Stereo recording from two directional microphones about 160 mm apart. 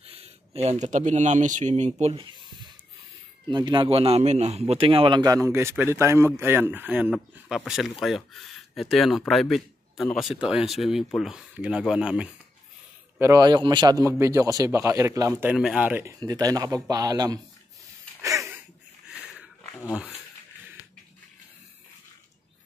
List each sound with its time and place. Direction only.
0.0 s speech: 40° right (ahead or behind)
3.4 s a man's voice: 30° right (ahead or behind); by 12.3 s 5° right (ahead or behind)
13.2 s speech: 20° right (ahead or behind)
15.4 s speech: 5° right (ahead or behind); by 17.4 s 25° right (ahead or behind)
18.2 s a sound: 20° right (ahead or behind)
19.0 s a sound: 5° right (ahead or behind)